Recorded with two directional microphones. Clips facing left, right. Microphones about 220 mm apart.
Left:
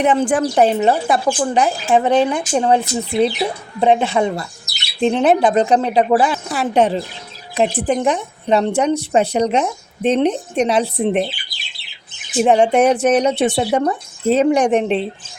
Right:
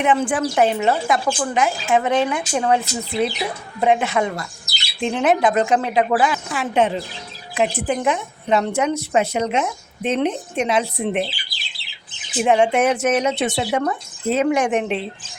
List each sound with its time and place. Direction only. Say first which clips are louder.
0.0 s a woman's voice: left 3 dB; 40° left (ahead or behind)
12.4 s a woman's voice: left 4 dB; 35° left (ahead or behind)